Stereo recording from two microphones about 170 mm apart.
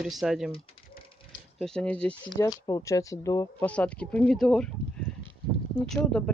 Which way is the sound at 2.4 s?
20° left (ahead or behind).